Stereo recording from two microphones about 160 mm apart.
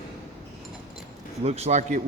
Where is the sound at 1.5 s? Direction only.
40° right (ahead or behind).